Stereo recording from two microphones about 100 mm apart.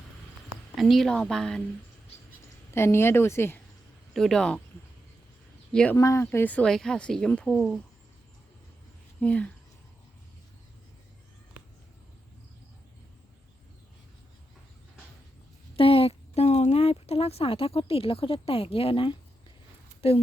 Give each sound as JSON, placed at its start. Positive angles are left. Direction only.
{"t": 0.8, "sound": "a woman's voice", "side_deg": 0}
{"t": 2.7, "sound": "speech", "side_deg": 25}
{"t": 4.1, "sound": "a woman's voice", "side_deg": 5}
{"t": 5.7, "sound": "speech", "side_deg": 10}
{"t": 6.0, "sound": "speech", "side_deg": 30}
{"t": 6.5, "sound": "speech", "side_deg": 10}
{"t": 9.2, "sound": "speech", "side_deg": 15}
{"t": 15.7, "sound": "a woman's voice", "side_deg": 70}
{"t": 20.0, "sound": "speech", "side_deg": 75}